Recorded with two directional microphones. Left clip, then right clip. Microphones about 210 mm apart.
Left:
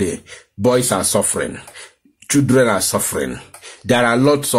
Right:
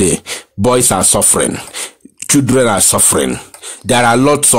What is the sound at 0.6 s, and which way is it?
A man's voice, 35° right (ahead or behind).